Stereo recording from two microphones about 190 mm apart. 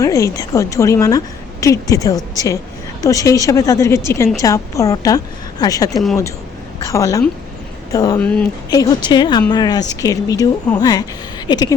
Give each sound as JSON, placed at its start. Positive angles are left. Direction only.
{"t": 0.0, "sound": "a woman's voice", "side_deg": 15}
{"t": 8.2, "sound": "a woman's voice", "side_deg": 5}
{"t": 8.7, "sound": "speech", "side_deg": 20}